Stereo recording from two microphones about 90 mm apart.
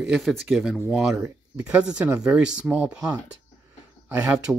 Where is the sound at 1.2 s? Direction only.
15° right (ahead or behind).